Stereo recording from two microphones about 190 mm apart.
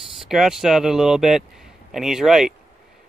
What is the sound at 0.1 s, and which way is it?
Speech, centre (ahead or behind).